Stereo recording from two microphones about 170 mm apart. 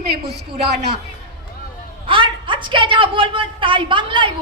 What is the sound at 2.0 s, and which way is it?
A woman's voice, 30° right (ahead or behind).